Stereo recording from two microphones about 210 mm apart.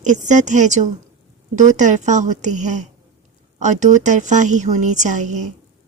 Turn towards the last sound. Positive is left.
turn(degrees=-35)  # may be behind; listen again after turning